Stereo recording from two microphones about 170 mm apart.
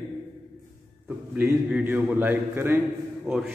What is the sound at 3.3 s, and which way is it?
Speech, centre (ahead or behind).